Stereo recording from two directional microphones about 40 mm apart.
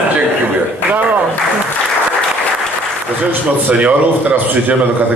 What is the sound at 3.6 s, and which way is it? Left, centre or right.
A man's voice, right.